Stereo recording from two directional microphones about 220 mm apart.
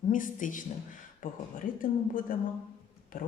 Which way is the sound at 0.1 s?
35° left (ahead or behind).